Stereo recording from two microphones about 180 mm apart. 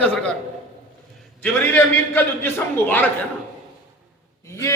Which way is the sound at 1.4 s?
10° left (ahead or behind).